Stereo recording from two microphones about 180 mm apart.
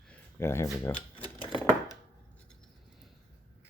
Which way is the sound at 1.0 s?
30° left (ahead or behind).